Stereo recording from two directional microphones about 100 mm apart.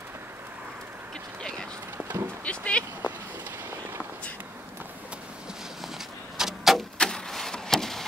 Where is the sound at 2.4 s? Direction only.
10° left (ahead or behind).